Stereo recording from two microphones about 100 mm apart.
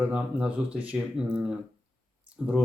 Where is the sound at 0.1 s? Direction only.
10° right (ahead or behind).